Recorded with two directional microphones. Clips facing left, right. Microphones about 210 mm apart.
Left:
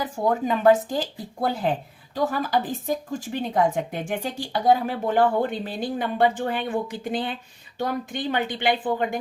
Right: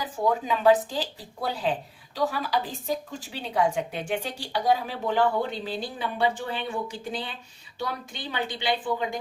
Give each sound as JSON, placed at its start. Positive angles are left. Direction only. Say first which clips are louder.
{"t": 0.0, "sound": "speech", "louder": "left 3 dB", "side_deg": 50}